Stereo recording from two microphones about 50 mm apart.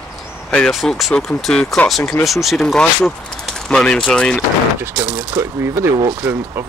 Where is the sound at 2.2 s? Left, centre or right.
Centre.